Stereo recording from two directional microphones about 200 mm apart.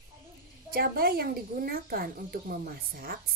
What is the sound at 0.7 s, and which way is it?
Speech, 50° right (ahead or behind).